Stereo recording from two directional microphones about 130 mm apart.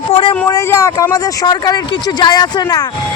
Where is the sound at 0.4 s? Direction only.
25° left (ahead or behind).